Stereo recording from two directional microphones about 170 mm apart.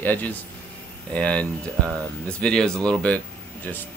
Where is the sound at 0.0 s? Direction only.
10° left (ahead or behind).